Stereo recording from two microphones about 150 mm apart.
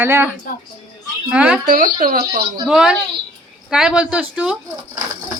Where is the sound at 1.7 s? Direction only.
70° right (ahead or behind); by 2.4 s 90° right.